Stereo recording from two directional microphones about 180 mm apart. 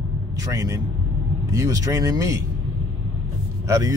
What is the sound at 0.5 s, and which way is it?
Speech, 20° right (ahead or behind).